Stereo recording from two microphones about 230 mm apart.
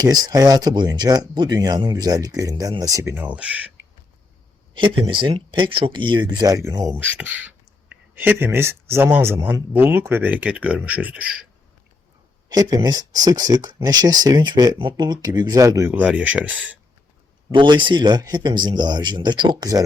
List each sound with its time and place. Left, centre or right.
0.0 s speech: centre
4.7 s speech: right; by 11.3 s centre
12.5 s speech: centre
17.5 s speech: right